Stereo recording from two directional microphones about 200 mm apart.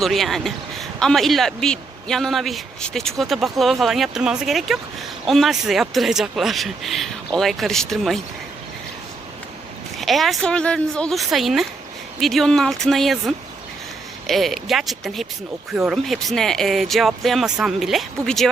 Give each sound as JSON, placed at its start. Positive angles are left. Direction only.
{"t": 0.0, "sound": "a man's voice", "side_deg": 0}
{"t": 10.0, "sound": "a man's voice", "side_deg": 0}